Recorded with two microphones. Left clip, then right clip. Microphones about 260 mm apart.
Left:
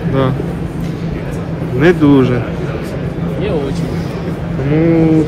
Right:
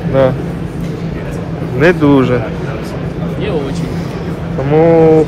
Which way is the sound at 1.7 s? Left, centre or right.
Centre.